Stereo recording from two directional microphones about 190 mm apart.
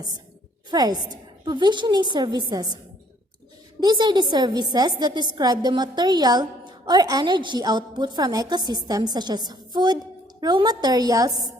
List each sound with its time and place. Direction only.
0.7 s a woman's voice: 20° right (ahead or behind)
3.8 s a woman's voice: 20° right (ahead or behind)